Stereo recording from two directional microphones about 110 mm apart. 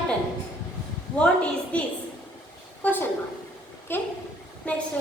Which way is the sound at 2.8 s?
15° left (ahead or behind).